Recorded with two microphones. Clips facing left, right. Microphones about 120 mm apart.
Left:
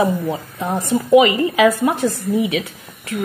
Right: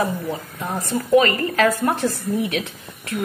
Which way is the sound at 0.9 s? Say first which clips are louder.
Left 4 dB; 15° left (ahead or behind).